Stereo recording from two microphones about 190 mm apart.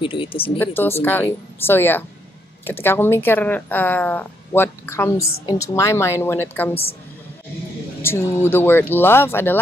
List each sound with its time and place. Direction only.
0.0 s speech: 25° left (ahead or behind)
0.6 s speech: 10° left (ahead or behind)
6.7 s a woman's voice: 30° left (ahead or behind)
8.0 s speech: 10° left (ahead or behind)